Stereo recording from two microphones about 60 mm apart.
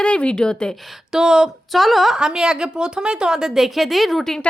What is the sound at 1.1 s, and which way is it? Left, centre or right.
A woman's voice, centre.